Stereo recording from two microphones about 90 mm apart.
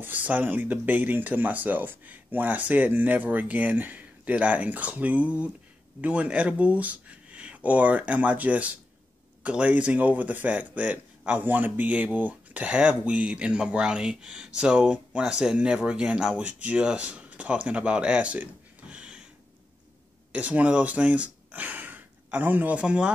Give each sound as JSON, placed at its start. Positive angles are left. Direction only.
{"t": 0.0, "sound": "speech", "side_deg": -20}
{"t": 20.3, "sound": "speech", "side_deg": -15}